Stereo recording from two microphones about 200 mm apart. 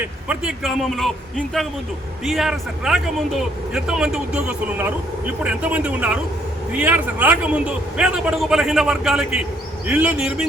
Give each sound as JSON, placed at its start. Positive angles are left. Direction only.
{"t": 0.3, "sound": "a man's voice", "side_deg": -5}